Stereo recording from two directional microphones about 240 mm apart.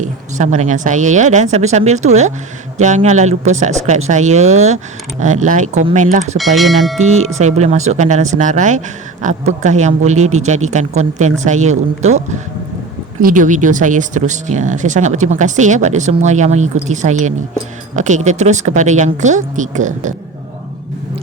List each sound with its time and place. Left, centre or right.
0.0 s speech: right
6.3 s speech: centre
7.0 s speech: right